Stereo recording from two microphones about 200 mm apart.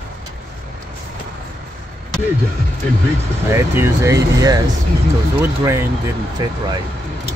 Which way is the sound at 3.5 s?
10° right (ahead or behind).